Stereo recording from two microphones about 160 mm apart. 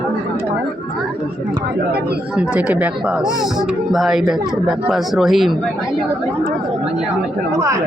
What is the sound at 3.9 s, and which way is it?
Speech, centre (ahead or behind).